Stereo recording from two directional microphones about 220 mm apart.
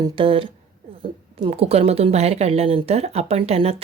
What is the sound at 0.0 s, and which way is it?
Speech, 25° right (ahead or behind).